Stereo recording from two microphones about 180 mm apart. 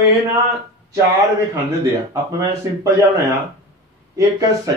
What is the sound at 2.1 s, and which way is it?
Speech, 20° right (ahead or behind).